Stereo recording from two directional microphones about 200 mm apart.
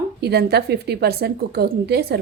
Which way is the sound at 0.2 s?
55° right (ahead or behind).